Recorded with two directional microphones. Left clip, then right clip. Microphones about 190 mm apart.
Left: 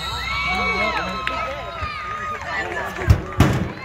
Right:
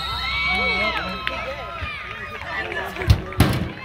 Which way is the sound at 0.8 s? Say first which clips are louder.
Left 1 dB; 10° right (ahead or behind).